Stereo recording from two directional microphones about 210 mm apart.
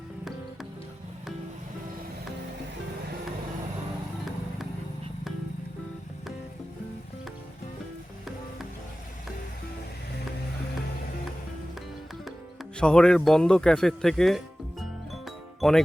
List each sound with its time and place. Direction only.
12.8 s music: 5° left (ahead or behind)